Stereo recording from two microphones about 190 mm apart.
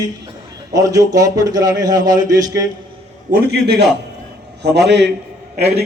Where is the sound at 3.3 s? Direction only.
60° right (ahead or behind).